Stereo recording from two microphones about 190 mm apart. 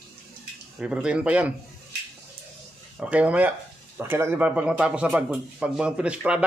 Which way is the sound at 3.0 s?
5° right (ahead or behind).